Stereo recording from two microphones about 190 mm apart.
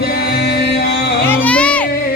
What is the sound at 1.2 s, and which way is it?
Music, 10° left (ahead or behind).